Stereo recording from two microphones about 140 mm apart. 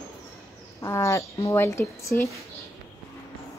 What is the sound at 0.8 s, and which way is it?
Speech, 20° left (ahead or behind).